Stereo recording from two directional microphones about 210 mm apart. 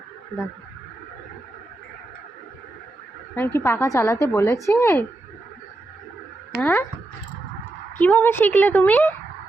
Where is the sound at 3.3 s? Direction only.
10° left (ahead or behind).